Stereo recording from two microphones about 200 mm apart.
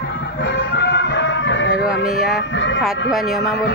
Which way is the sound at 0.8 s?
60° left (ahead or behind).